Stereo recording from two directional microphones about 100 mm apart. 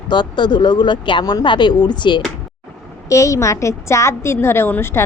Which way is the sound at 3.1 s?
30° left (ahead or behind).